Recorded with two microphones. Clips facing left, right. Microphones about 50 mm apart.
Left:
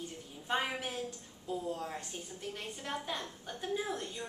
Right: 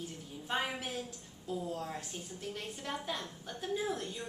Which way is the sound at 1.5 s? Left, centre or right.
Centre.